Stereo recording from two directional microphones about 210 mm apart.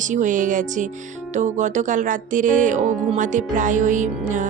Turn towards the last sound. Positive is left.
turn(degrees=-35)  # may be behind; listen again after turning